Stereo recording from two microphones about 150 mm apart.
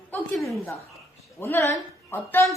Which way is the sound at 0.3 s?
Centre (ahead or behind).